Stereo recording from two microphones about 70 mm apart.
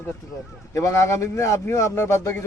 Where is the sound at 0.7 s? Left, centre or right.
Left.